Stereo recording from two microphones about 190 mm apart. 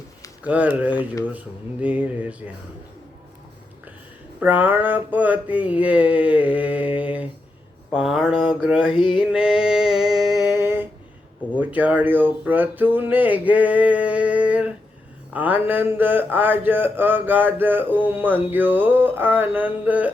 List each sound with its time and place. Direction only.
0.4 s speech: 5° right (ahead or behind)
4.4 s speech: 10° right (ahead or behind)
8.9 s a sound: 25° left (ahead or behind)
9.1 s music: 5° right (ahead or behind)
10.5 s a sound: 10° right (ahead or behind)
11.5 s speech: 10° right (ahead or behind)